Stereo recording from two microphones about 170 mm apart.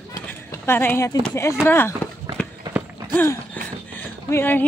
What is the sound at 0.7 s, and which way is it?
Speech, 15° left (ahead or behind).